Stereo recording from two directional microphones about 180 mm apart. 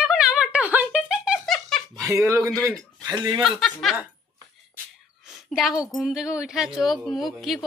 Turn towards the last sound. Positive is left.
turn(degrees=0)  # may be behind; listen again after turning